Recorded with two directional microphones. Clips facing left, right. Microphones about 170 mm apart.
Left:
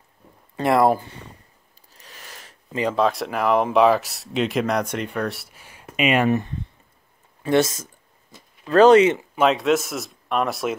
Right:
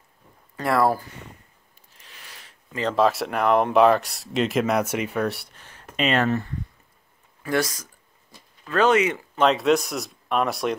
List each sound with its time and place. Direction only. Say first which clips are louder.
0.6 s speech: left 3 dB; 20° left (ahead or behind)
2.0 s a sound: left 4 dB; 40° left (ahead or behind)
2.7 s speech: left 3 dB; 10° left (ahead or behind)
3.0 s speech: right 2 dB; centre (ahead or behind); by 6.6 s 20° left (ahead or behind)
7.4 s a sound: left 5 dB; 25° left (ahead or behind)
9.3 s speech: left 1 dB; 5° left (ahead or behind)